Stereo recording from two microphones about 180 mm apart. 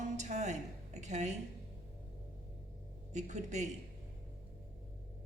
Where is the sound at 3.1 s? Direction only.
40° right (ahead or behind).